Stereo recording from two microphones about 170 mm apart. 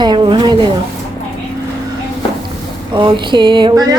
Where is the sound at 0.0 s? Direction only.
25° right (ahead or behind).